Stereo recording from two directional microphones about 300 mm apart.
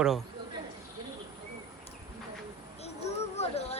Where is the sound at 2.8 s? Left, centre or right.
Left.